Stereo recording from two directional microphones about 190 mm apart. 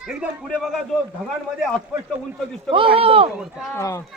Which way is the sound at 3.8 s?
15° left (ahead or behind).